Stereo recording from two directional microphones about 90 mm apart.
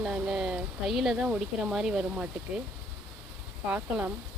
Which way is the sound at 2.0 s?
15° right (ahead or behind).